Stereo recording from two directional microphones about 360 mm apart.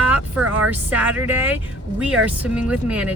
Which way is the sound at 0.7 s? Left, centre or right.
Centre.